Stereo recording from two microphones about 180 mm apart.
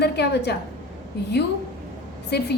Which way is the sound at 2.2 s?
65° left (ahead or behind).